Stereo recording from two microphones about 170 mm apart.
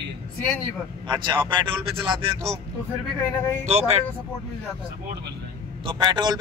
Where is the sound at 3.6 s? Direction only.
40° right (ahead or behind).